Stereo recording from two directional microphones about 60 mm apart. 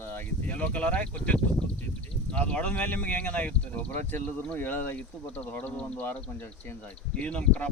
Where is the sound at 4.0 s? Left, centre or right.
Left.